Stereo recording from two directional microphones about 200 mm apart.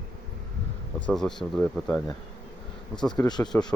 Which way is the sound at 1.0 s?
5° left (ahead or behind).